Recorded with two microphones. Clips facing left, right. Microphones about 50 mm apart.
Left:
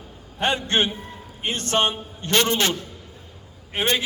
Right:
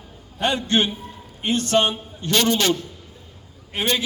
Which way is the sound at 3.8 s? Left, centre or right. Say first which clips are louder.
Even; left.